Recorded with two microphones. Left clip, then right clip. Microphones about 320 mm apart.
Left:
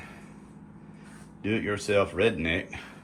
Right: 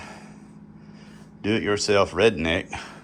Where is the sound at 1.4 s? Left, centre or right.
Centre.